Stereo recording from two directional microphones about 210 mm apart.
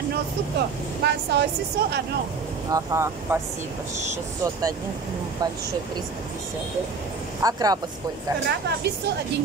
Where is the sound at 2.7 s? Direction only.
15° right (ahead or behind).